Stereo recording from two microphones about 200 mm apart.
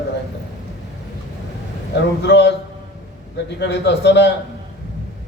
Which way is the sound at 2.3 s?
55° left (ahead or behind).